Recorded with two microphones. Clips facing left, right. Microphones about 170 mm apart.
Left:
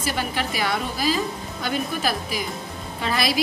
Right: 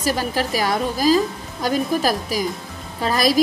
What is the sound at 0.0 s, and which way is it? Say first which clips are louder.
A woman's voice: right 5 dB; 40° right (ahead or behind).